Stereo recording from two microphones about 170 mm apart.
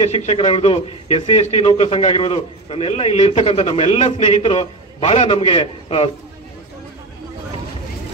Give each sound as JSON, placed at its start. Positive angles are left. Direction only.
{"t": 0.0, "sound": "a man's voice", "side_deg": 40}